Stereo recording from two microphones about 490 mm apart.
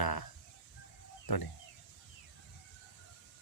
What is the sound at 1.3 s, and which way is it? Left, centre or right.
Speech, left.